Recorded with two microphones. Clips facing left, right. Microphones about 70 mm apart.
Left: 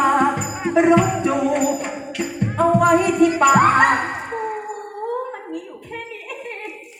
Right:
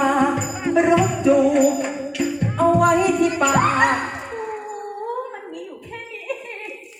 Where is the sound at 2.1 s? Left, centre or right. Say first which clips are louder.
Right 1 dB; left.